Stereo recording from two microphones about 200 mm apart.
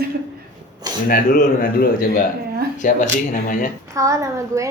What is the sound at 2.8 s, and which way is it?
Speech, 40° left (ahead or behind).